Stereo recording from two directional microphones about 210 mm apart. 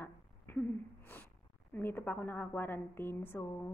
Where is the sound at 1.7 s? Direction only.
10° left (ahead or behind).